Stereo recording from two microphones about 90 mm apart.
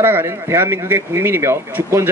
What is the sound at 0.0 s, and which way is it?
Speech, 25° right (ahead or behind).